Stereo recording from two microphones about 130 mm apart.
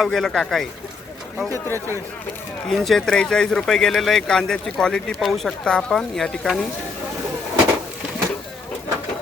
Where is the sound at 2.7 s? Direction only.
Centre (ahead or behind).